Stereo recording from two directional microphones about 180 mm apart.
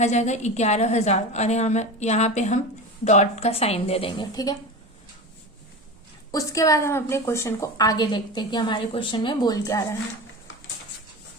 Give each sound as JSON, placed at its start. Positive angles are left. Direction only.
{"t": 0.0, "sound": "a woman's voice", "side_deg": 40}
{"t": 6.3, "sound": "a woman's voice", "side_deg": 20}